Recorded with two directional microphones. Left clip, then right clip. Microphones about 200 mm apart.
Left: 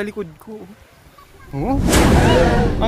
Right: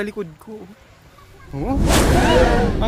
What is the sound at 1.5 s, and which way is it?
Speech, 25° left (ahead or behind).